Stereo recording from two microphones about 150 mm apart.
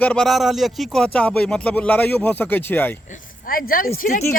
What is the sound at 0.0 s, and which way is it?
Speech, 5° left (ahead or behind).